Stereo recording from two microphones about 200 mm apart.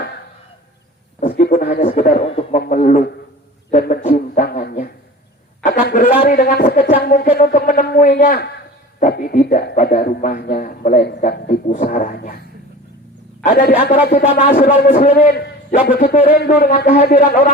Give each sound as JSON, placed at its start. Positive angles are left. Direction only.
{"t": 1.2, "sound": "a sound", "side_deg": 40}
{"t": 2.0, "sound": "a man's voice", "side_deg": 40}
{"t": 13.4, "sound": "a man's voice", "side_deg": 45}